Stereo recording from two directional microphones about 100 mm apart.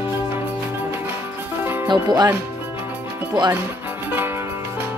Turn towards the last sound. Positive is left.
turn(degrees=-20)  # may be behind; listen again after turning